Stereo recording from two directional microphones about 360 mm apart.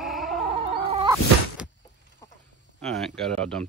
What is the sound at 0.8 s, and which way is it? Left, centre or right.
Chicken, centre.